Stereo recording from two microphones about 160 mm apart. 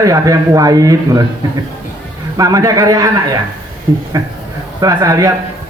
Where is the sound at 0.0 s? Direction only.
20° right (ahead or behind).